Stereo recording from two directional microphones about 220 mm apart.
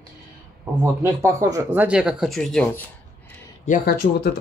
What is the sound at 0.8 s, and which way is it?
Speech, 15° right (ahead or behind).